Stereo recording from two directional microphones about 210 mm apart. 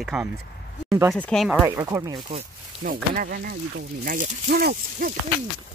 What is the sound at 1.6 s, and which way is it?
Speech, 15° right (ahead or behind).